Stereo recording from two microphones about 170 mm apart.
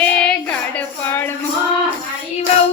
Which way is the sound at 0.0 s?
5° left (ahead or behind).